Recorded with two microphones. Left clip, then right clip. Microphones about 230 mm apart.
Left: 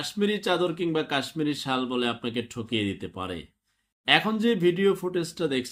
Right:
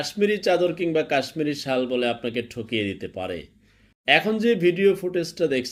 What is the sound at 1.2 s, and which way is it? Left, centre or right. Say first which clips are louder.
Speech: right 3 dB; centre.